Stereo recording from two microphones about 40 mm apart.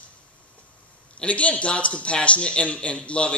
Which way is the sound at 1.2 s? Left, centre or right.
Left.